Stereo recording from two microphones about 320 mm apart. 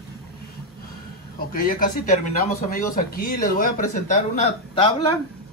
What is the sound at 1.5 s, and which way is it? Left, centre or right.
A man's voice, left.